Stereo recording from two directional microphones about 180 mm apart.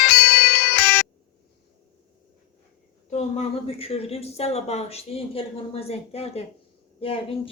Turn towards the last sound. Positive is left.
turn(degrees=30)  # may be behind; listen again after turning